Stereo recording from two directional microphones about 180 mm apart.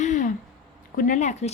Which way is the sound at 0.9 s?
50° left (ahead or behind).